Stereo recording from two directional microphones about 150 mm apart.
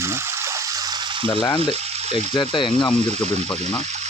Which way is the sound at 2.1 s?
35° left (ahead or behind).